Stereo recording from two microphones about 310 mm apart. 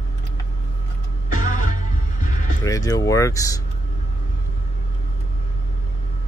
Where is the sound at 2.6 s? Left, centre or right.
Centre.